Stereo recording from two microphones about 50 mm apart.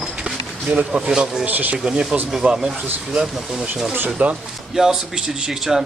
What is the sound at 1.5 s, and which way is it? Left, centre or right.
Speech, right.